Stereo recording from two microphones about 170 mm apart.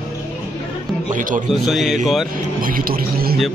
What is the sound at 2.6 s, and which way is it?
Speech, 55° right (ahead or behind).